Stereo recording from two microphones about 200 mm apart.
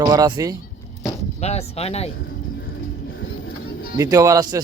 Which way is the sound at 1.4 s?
30° left (ahead or behind).